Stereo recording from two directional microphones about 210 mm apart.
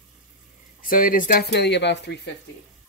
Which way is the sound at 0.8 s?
40° left (ahead or behind).